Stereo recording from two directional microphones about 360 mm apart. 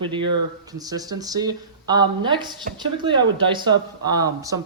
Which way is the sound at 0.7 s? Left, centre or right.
Centre.